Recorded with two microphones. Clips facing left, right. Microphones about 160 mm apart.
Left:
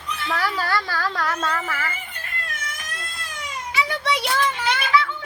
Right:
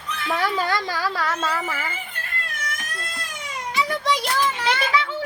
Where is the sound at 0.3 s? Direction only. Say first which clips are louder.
Right 2 dB; 20° right (ahead or behind).